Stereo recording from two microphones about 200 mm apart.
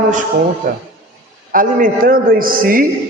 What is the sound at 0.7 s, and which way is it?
A man's voice, 40° right (ahead or behind).